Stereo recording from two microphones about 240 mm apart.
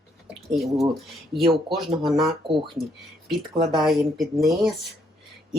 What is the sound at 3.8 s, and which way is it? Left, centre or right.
Speech, centre.